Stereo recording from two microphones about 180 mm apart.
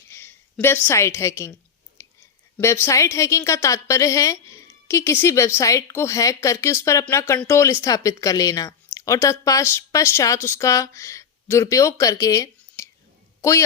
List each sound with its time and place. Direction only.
0.1 s a woman's voice: 10° left (ahead or behind)
2.0 s a sound: 15° left (ahead or behind)
2.6 s a woman's voice: 15° left (ahead or behind)